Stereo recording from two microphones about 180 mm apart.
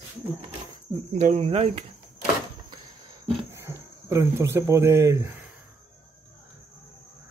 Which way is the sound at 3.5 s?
15° right (ahead or behind).